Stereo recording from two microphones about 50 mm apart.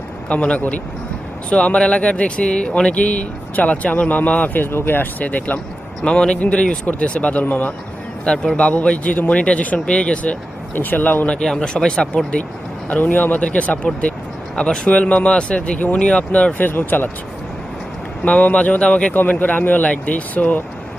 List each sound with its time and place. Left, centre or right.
0.3 s speech: left
4.5 s speech: left
6.0 s speech: centre
8.2 s speech: centre
10.8 s speech: left
11.3 s speech: centre
12.9 s speech: left
16.6 s speech: left
18.3 s speech: left
18.8 s speech: centre
19.1 s speech: left